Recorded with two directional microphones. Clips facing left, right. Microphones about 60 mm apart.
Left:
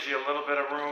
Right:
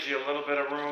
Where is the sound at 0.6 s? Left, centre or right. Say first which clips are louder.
Even; centre.